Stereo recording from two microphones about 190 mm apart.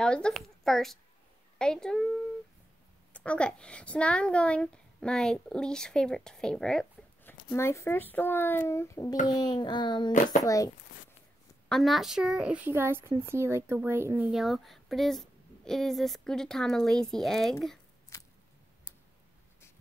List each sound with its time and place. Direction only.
0.0 s a woman's voice: 5° left (ahead or behind)
7.5 s speech: 15° left (ahead or behind)
9.3 s a sound: 20° left (ahead or behind)
10.4 s speech: 15° left (ahead or behind)
11.7 s speech: centre (ahead or behind)